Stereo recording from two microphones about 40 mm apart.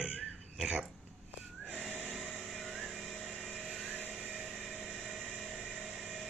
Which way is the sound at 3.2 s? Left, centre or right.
Centre.